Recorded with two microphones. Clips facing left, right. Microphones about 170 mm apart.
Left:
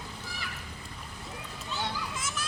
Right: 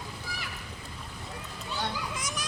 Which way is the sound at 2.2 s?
15° right (ahead or behind).